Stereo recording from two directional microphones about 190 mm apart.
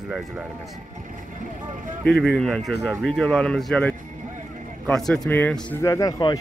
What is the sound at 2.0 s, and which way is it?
Speech, centre (ahead or behind).